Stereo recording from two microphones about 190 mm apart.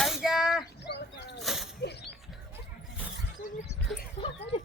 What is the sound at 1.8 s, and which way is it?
Mechanisms, 60° left (ahead or behind).